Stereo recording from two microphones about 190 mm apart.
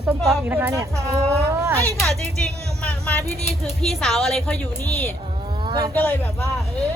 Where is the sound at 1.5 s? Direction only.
15° right (ahead or behind).